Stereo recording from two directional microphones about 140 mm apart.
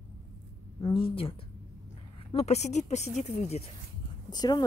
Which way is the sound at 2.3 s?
50° left (ahead or behind).